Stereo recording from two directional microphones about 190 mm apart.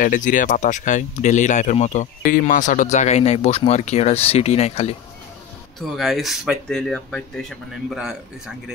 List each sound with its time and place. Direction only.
0.0 s speech: 45° left (ahead or behind)
5.8 s speech: centre (ahead or behind)